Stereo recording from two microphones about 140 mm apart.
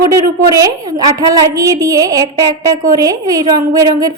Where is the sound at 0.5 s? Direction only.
25° right (ahead or behind).